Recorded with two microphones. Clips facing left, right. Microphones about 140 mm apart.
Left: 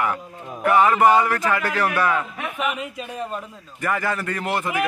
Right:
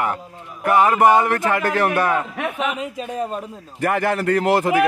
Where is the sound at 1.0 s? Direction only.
50° right (ahead or behind).